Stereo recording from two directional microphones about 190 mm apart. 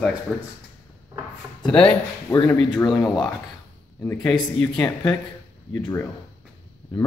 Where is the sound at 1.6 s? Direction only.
5° left (ahead or behind).